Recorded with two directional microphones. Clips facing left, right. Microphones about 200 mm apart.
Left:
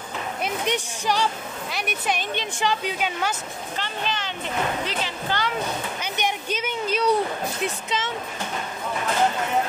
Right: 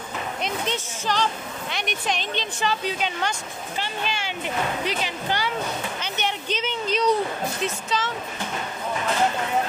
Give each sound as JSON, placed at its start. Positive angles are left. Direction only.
{"t": 0.4, "sound": "speech", "side_deg": 15}
{"t": 3.7, "sound": "speech", "side_deg": -10}
{"t": 5.9, "sound": "speech", "side_deg": 10}
{"t": 7.6, "sound": "speech", "side_deg": 20}